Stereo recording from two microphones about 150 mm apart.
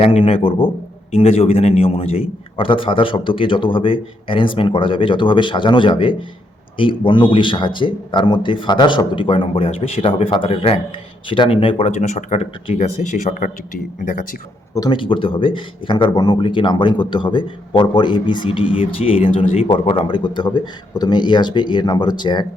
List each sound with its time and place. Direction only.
0.0 s speech: 40° left (ahead or behind); by 14.3 s 60° left (ahead or behind)
14.8 s speech: 35° left (ahead or behind)